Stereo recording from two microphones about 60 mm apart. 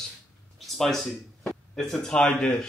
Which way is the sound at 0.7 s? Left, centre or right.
Centre.